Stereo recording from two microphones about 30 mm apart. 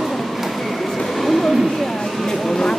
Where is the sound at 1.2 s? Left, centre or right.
Centre.